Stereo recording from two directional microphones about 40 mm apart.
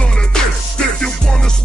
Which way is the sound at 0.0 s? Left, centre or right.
Left.